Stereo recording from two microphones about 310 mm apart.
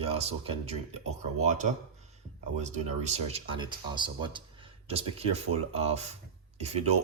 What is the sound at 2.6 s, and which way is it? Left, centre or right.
Speech, right.